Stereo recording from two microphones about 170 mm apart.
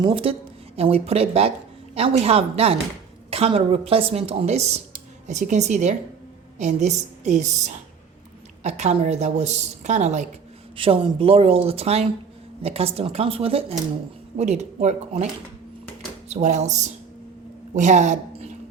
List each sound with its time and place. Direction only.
0.0 s a woman's voice: 35° right (ahead or behind)
10.8 s a woman's voice: 30° right (ahead or behind)
16.3 s a woman's voice: 40° right (ahead or behind)